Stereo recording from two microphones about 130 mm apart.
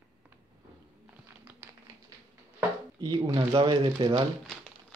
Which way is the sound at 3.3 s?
40° right (ahead or behind).